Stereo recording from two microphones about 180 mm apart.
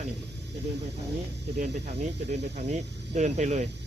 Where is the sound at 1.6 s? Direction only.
40° right (ahead or behind).